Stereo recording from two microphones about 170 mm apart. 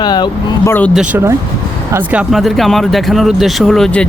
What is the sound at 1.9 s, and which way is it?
Speech, 10° right (ahead or behind).